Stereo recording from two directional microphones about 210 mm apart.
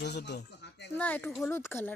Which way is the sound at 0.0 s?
55° left (ahead or behind).